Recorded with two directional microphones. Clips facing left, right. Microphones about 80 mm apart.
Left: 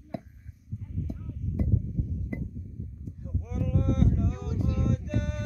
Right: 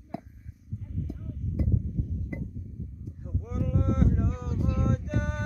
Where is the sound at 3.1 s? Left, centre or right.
Right.